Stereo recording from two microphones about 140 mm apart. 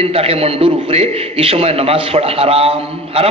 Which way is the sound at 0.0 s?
45° right (ahead or behind).